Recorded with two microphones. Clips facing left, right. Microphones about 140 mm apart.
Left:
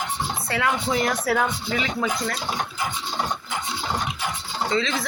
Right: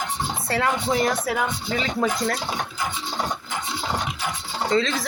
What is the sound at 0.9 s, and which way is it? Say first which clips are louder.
Speech: right 1 dB; 20° right (ahead or behind).